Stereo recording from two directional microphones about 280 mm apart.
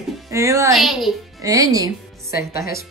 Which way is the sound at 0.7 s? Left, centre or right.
Centre.